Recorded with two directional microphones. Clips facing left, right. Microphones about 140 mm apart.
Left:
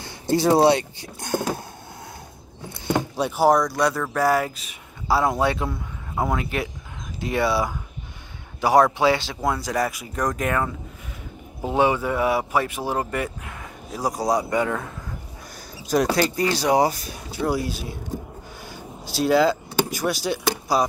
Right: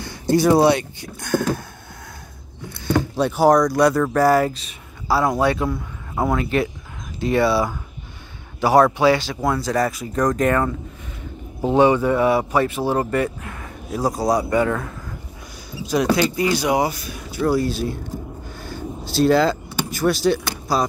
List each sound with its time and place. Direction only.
0.0 s speech: 25° left (ahead or behind)
3.2 s speech: 5° left (ahead or behind)
5.0 s a man's voice: 20° left (ahead or behind); by 10.7 s 5° left (ahead or behind)
11.7 s speech: 10° left (ahead or behind)
15.9 s speech: 40° left (ahead or behind)
17.4 s speech: 10° left (ahead or behind)
18.6 s vehicle: 10° left (ahead or behind)